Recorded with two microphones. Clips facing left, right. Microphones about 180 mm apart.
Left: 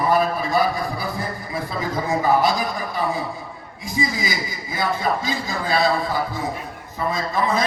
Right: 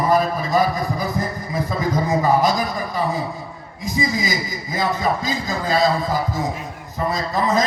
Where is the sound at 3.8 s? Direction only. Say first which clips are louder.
Right 2 dB; 40° right (ahead or behind).